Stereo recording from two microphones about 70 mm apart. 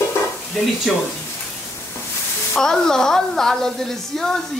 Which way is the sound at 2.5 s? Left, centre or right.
Centre.